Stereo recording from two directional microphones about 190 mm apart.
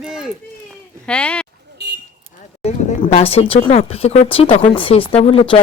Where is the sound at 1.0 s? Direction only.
5° left (ahead or behind).